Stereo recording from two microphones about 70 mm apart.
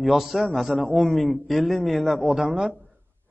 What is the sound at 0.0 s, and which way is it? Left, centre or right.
A man's voice, centre.